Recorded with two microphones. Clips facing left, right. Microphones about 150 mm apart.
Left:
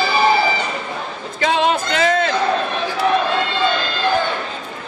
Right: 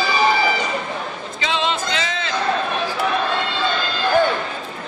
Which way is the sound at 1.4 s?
50° left (ahead or behind).